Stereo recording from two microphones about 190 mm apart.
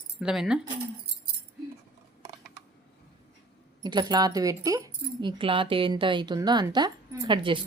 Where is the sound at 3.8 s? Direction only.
20° right (ahead or behind).